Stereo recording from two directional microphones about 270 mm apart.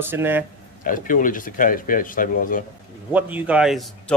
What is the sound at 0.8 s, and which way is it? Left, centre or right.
Speech, left.